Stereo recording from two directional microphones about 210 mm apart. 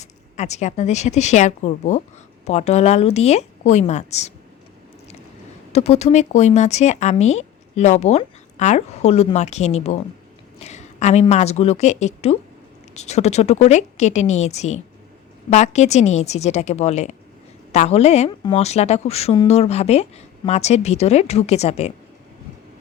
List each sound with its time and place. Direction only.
0.0 s speech: 35° left (ahead or behind)
5.7 s a woman's voice: 30° left (ahead or behind)